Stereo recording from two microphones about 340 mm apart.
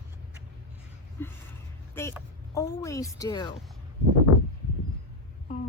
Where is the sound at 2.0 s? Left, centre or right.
Centre.